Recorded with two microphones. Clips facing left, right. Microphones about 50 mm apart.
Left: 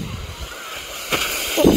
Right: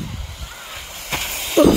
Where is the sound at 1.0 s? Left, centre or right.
Left.